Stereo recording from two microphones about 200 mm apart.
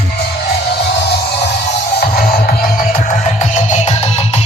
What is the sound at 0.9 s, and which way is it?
Music, 55° left (ahead or behind).